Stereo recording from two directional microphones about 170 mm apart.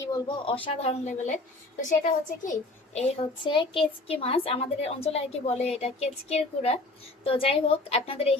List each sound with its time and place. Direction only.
0.0 s speech: 25° left (ahead or behind)
0.6 s a woman's voice: 35° left (ahead or behind)
2.4 s a child's voice: 45° left (ahead or behind)
3.4 s a woman's voice: 30° left (ahead or behind)